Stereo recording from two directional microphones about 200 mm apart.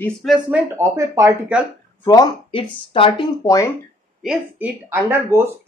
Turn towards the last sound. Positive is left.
turn(degrees=-10)  # may be behind; listen again after turning